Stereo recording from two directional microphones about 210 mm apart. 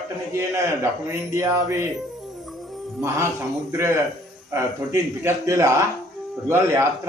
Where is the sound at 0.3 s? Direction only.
15° right (ahead or behind).